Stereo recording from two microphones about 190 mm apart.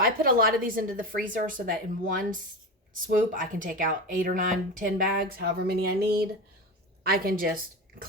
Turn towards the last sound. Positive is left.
turn(degrees=-50)  # may be behind; listen again after turning